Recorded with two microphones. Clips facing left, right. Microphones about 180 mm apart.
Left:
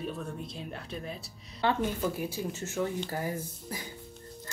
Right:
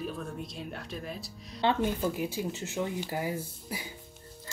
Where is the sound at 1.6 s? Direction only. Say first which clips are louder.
Right 1 dB; 20° right (ahead or behind).